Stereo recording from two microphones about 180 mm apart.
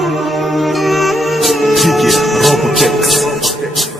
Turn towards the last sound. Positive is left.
turn(degrees=0)  # may be behind; listen again after turning